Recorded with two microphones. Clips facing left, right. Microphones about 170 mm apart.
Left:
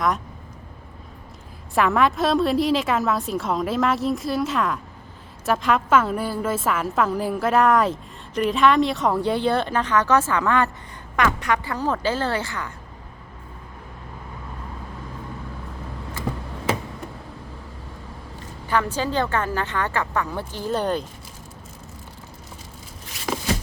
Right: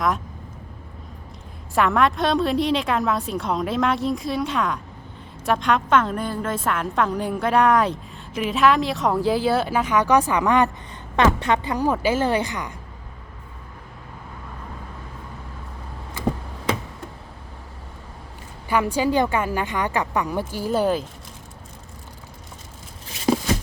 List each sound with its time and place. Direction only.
1.7 s a woman's voice: centre (ahead or behind); by 12.7 s 15° right (ahead or behind)
18.7 s speech: 10° right (ahead or behind)
23.3 s a sound: 30° right (ahead or behind)